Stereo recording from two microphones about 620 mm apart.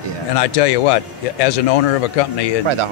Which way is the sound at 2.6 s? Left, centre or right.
Right.